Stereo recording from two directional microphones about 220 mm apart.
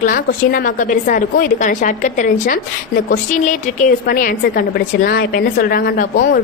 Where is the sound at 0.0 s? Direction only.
40° left (ahead or behind).